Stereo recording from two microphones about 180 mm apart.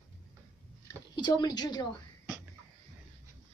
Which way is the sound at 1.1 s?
25° left (ahead or behind).